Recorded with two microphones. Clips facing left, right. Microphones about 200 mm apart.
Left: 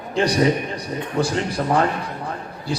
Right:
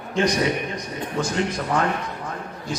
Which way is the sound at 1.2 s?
35° left (ahead or behind).